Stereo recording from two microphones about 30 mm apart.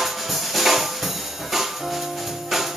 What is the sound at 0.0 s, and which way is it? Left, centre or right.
Music, centre.